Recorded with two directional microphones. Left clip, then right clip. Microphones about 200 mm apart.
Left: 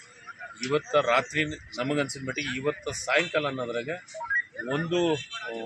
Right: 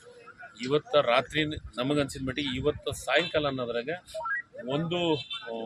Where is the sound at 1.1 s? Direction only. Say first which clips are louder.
Left 1 dB; 25° right (ahead or behind).